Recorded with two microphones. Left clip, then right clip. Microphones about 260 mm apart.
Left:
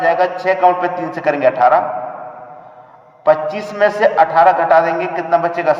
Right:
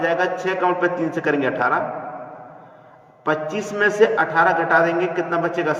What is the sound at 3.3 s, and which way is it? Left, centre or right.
A man's voice, centre.